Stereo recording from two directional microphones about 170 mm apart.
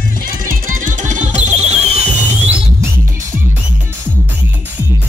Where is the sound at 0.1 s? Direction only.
55° right (ahead or behind).